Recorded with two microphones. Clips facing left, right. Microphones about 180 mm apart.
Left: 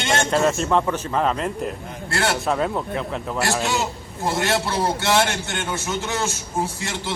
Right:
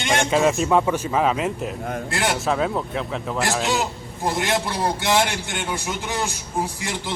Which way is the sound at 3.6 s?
15° right (ahead or behind).